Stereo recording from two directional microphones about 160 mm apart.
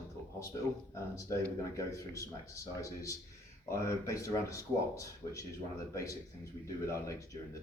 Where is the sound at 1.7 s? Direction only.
20° left (ahead or behind).